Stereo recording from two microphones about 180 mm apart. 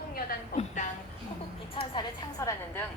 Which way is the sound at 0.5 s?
40° left (ahead or behind).